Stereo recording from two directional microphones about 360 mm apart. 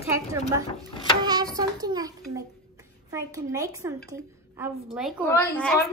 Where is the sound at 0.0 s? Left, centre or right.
Centre.